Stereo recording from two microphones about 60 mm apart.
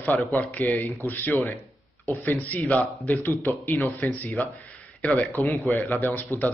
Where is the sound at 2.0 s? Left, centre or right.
Left.